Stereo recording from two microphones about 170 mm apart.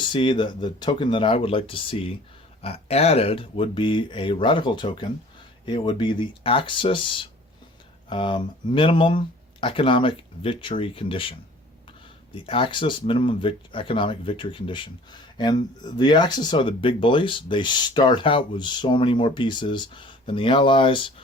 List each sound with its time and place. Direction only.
0.1 s speech: 30° left (ahead or behind)